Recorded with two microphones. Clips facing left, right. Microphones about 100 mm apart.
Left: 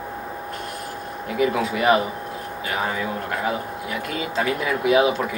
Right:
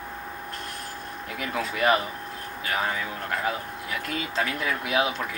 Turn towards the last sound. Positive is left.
turn(degrees=5)  # may be behind; listen again after turning